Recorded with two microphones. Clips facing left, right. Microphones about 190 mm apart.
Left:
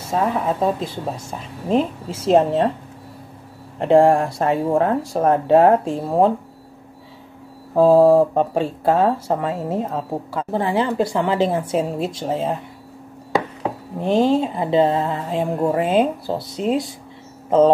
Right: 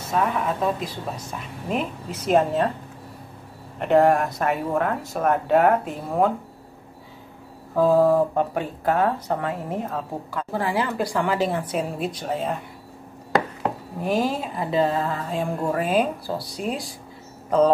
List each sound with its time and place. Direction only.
0.1 s a woman's voice: 30° left (ahead or behind)
3.8 s a woman's voice: 30° left (ahead or behind)
7.7 s a woman's voice: 25° left (ahead or behind)
13.9 s a woman's voice: 25° left (ahead or behind)